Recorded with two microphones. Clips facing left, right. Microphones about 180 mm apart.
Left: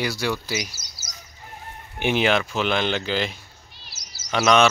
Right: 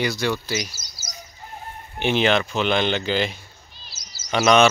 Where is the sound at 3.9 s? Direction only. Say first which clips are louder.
Even; 70° left (ahead or behind).